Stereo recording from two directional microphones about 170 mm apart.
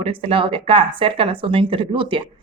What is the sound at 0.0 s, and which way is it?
A woman's voice, 35° right (ahead or behind).